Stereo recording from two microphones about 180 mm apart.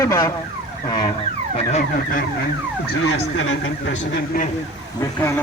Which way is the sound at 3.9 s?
40° left (ahead or behind).